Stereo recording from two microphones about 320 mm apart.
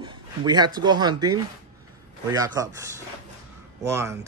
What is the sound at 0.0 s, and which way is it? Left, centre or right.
Speech, centre.